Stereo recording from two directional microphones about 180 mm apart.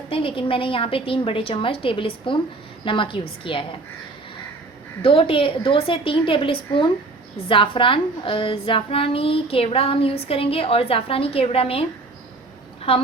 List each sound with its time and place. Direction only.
0.1 s a woman's voice: 30° left (ahead or behind)
5.0 s a woman's voice: 30° left (ahead or behind)
12.9 s a woman's voice: 30° left (ahead or behind)